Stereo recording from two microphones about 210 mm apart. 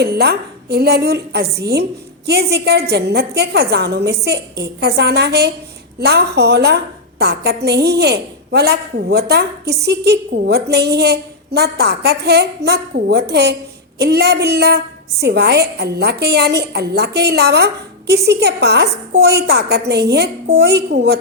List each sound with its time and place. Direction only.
0.0 s a woman's voice: 50° right (ahead or behind)